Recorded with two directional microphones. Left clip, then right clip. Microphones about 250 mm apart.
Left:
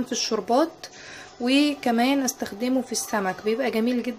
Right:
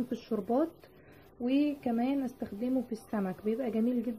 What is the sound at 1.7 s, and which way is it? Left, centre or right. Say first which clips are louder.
Speech: left 10 dB; centre.